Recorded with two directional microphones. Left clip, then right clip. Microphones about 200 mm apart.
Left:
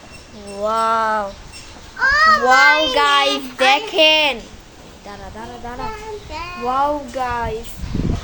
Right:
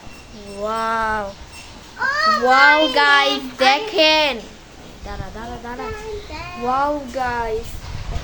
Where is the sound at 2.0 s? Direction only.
25° left (ahead or behind).